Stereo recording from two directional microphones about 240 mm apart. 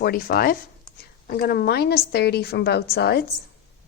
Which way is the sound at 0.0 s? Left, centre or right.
Left.